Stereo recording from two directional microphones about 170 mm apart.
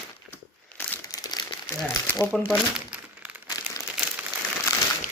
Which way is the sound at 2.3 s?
5° right (ahead or behind).